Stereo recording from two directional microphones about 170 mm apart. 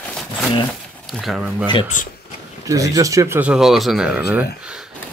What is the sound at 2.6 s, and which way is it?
Speech, 20° right (ahead or behind).